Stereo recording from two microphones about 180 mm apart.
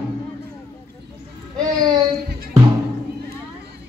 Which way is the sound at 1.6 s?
25° right (ahead or behind).